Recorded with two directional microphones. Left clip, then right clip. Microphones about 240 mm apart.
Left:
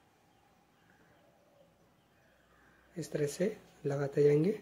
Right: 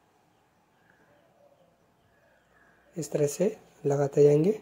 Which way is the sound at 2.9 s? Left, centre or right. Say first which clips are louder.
Right 8 dB; centre.